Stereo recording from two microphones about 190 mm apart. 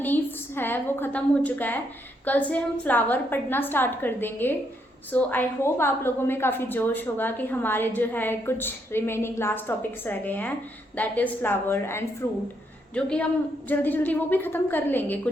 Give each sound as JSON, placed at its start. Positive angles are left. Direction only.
{"t": 0.0, "sound": "a woman's voice", "side_deg": 10}